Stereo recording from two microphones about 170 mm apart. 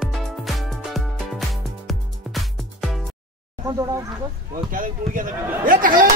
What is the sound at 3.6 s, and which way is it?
Speech, 15° right (ahead or behind).